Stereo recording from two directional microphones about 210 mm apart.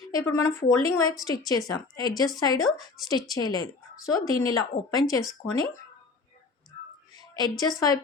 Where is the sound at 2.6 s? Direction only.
Centre (ahead or behind).